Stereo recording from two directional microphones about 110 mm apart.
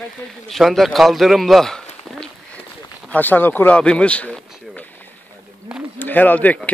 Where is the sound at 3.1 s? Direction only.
15° left (ahead or behind).